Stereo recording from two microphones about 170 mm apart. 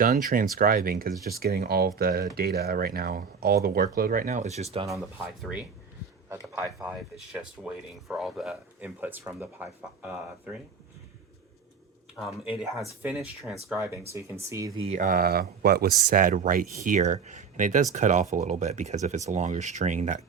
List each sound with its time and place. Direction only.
0.0 s speech: 55° right (ahead or behind); by 4.9 s 35° right (ahead or behind)
4.9 s speech: 5° right (ahead or behind)
12.5 s speech: centre (ahead or behind)
14.1 s speech: 15° right (ahead or behind)
14.8 s speech: 40° right (ahead or behind); by 15.9 s 65° right (ahead or behind)
16.0 s speech: 55° right (ahead or behind)